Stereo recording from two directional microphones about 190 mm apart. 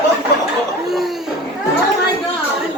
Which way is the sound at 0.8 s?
Centre (ahead or behind).